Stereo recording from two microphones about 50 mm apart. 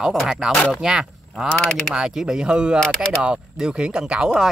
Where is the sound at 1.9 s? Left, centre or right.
Centre.